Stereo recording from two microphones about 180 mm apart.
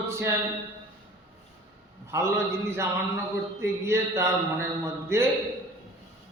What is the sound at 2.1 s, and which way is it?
A man's voice, 15° right (ahead or behind).